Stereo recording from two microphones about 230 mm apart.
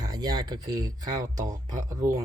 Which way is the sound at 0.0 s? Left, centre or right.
Centre.